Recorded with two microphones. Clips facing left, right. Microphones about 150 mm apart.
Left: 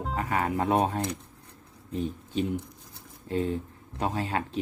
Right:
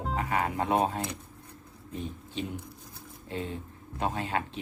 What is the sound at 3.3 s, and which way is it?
Speech, 40° left (ahead or behind).